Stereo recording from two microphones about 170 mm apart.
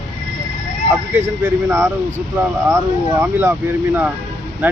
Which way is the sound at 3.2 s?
15° right (ahead or behind).